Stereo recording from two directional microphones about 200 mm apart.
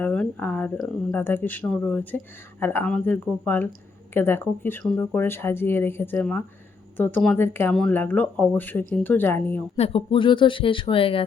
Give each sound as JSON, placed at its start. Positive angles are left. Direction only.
{"t": 0.0, "sound": "speech", "side_deg": 5}
{"t": 9.7, "sound": "speech", "side_deg": 30}